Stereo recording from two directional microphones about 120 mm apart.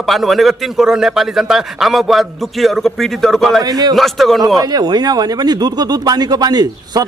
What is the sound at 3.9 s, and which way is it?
Speech, centre (ahead or behind).